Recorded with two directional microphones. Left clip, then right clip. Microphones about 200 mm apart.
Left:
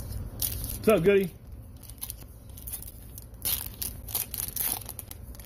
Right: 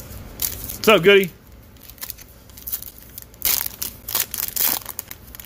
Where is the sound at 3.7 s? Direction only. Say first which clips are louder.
Right 11 dB; 5° right (ahead or behind).